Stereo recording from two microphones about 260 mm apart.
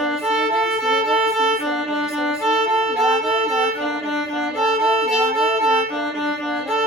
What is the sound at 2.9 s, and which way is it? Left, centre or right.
Music, centre.